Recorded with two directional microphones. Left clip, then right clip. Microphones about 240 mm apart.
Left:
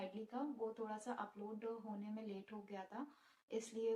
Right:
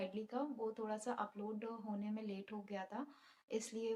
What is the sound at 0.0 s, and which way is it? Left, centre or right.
Speech, right.